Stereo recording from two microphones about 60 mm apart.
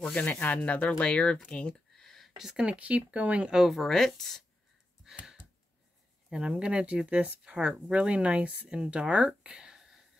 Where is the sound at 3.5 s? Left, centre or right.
Centre.